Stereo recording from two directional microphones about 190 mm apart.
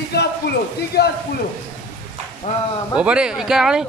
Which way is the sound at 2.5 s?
35° left (ahead or behind).